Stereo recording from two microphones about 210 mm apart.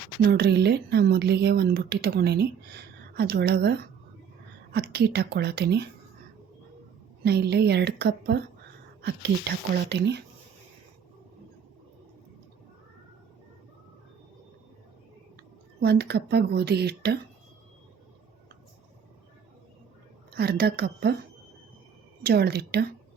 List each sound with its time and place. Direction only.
0.2 s speech: 50° right (ahead or behind)
7.3 s speech: 50° right (ahead or behind)
15.8 s speech: 50° right (ahead or behind)
20.3 s speech: 50° right (ahead or behind)
22.2 s speech: 50° right (ahead or behind)